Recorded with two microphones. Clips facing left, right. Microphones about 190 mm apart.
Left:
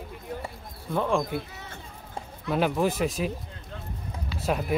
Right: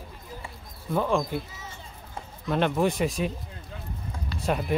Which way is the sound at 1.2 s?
60° left (ahead or behind).